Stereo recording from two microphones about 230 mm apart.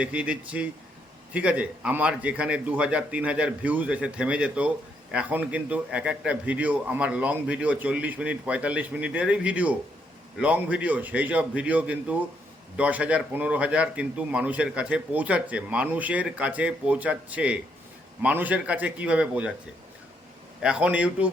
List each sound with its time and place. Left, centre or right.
0.0 s speech: centre
20.6 s speech: centre